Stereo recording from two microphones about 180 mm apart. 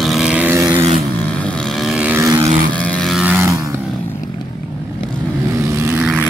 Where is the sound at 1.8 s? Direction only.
5° right (ahead or behind).